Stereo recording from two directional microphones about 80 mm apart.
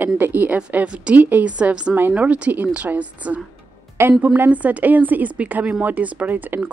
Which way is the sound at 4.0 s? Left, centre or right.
Right.